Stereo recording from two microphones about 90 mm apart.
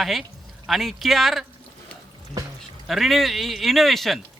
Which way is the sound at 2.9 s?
Centre (ahead or behind).